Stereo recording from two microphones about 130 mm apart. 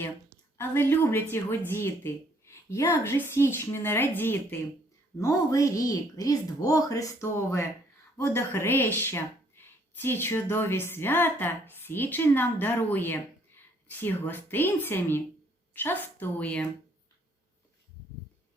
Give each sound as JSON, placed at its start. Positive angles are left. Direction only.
{"t": 0.5, "sound": "a woman's voice", "side_deg": 15}